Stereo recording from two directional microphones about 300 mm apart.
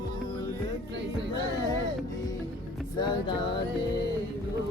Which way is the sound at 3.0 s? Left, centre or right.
Centre.